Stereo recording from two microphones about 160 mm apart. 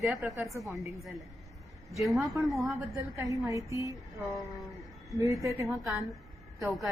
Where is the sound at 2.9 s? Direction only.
20° right (ahead or behind).